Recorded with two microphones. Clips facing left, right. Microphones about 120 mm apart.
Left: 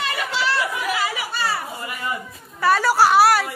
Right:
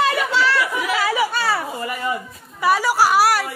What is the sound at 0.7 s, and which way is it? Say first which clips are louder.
Chatter: right 3 dB; 90° right.